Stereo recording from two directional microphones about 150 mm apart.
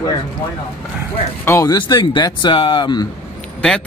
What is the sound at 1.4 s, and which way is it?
Speech, 20° left (ahead or behind).